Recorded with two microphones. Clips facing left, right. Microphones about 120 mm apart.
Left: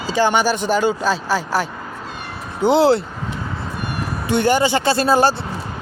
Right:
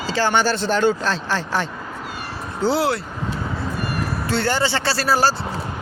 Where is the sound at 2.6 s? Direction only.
20° left (ahead or behind).